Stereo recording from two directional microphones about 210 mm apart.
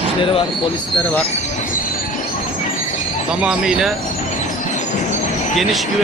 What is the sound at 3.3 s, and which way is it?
Speech, 5° right (ahead or behind).